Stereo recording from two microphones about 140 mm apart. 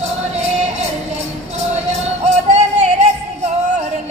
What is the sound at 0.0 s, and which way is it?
Music, 50° right (ahead or behind).